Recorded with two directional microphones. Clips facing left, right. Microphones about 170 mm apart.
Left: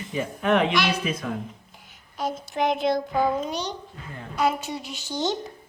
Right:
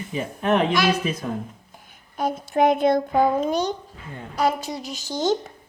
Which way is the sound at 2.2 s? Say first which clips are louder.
Right 6 dB; 55° right (ahead or behind).